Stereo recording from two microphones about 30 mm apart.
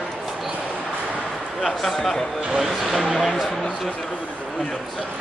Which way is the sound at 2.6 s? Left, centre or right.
Centre.